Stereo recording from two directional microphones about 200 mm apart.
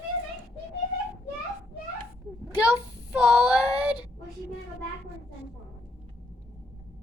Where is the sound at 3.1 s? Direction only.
5° right (ahead or behind).